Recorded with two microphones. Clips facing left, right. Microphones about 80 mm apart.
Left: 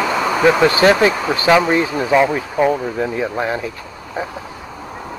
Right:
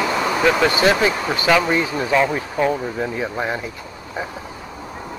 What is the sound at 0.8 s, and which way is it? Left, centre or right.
Speech, left.